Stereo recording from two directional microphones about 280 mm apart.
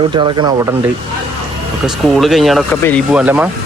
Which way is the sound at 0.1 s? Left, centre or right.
Centre.